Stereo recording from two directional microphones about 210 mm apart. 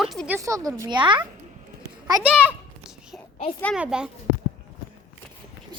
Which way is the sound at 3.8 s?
5° right (ahead or behind).